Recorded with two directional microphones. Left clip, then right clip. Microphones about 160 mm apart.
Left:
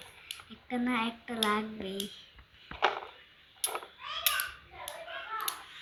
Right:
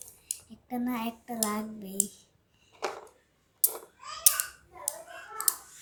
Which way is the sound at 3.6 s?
30° right (ahead or behind).